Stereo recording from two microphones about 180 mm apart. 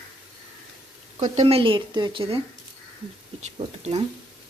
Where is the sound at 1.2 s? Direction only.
40° right (ahead or behind).